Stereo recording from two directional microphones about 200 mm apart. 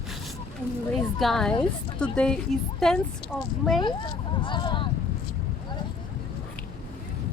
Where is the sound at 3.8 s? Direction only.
25° left (ahead or behind).